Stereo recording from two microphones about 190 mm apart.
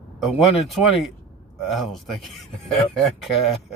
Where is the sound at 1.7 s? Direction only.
Centre (ahead or behind).